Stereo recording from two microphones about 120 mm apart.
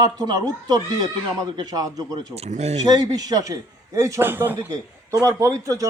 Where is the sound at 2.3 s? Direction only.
65° right (ahead or behind).